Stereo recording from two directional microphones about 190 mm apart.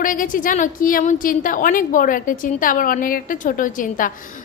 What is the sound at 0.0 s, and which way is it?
A woman's voice, 45° left (ahead or behind).